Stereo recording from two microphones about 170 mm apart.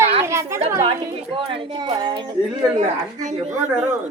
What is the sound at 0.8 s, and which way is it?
A woman's voice, 30° right (ahead or behind).